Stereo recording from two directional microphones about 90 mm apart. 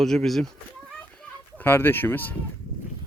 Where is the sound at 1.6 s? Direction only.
25° left (ahead or behind).